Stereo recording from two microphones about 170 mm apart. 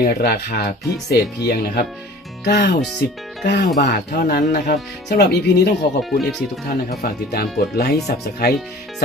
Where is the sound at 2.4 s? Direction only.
85° left.